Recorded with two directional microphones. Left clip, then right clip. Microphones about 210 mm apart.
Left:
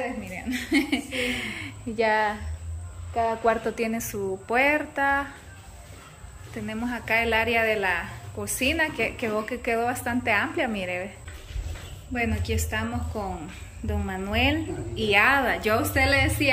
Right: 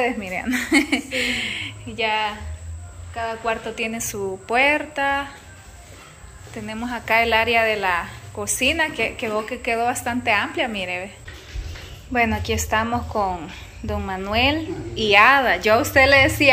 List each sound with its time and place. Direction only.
0.2 s a woman's voice: 5° left (ahead or behind)
2.0 s a woman's voice: 30° left (ahead or behind)
6.5 s a woman's voice: 10° left (ahead or behind)
12.1 s a woman's voice: 5° left (ahead or behind)